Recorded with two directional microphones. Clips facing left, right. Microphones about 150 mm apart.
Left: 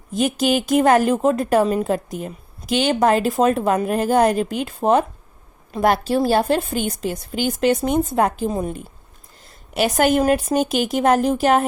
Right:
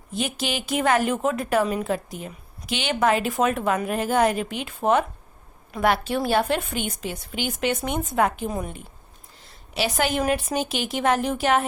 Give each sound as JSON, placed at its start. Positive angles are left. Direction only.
{"t": 0.1, "sound": "speech", "side_deg": 45}
{"t": 9.7, "sound": "a woman's voice", "side_deg": 45}